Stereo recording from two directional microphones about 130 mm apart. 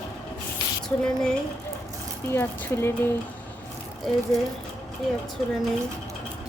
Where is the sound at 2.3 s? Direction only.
20° left (ahead or behind).